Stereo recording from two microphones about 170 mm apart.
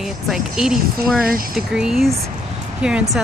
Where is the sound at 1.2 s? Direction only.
60° right (ahead or behind).